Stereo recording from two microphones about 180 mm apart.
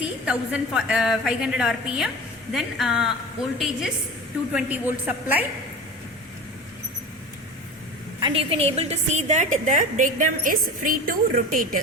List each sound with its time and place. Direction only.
0.0 s a woman's voice: 5° right (ahead or behind)
8.2 s a woman's voice: 30° right (ahead or behind); by 11.8 s 50° right (ahead or behind)